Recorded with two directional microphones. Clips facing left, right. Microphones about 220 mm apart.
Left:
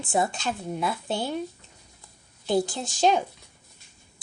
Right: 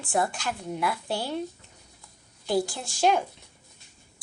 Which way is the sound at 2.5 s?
20° left (ahead or behind).